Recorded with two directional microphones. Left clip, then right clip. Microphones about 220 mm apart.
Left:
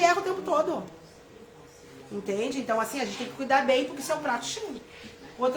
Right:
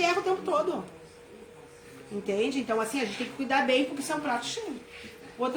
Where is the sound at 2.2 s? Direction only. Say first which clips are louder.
Right 1 dB; 20° left (ahead or behind).